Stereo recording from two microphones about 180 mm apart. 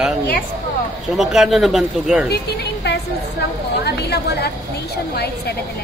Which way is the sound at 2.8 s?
65° left (ahead or behind).